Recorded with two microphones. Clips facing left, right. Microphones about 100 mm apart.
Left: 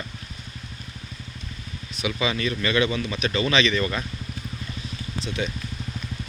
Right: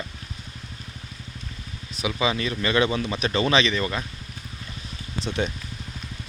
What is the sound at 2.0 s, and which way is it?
Speech, 25° right (ahead or behind).